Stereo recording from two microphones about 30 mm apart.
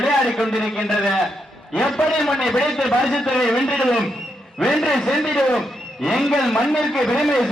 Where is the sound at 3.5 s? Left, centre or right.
Left.